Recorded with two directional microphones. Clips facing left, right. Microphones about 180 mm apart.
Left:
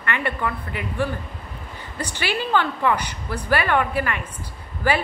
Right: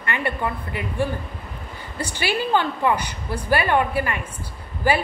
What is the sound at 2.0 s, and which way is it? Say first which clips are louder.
A woman's voice: right 2 dB; 15° right (ahead or behind).